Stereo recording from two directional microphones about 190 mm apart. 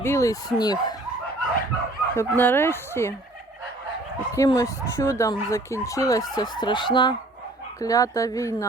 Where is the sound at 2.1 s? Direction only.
10° left (ahead or behind).